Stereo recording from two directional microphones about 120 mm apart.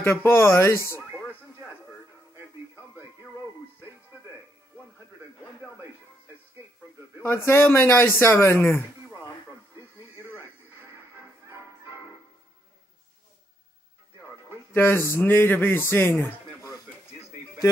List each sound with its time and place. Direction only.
0.0 s speech: 20° left (ahead or behind)
2.3 s music: 20° right (ahead or behind)
7.2 s speech: 20° left (ahead or behind)
14.7 s a man's voice: 20° left (ahead or behind)